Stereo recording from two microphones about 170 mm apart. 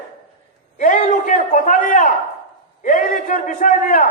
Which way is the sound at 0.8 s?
50° left (ahead or behind).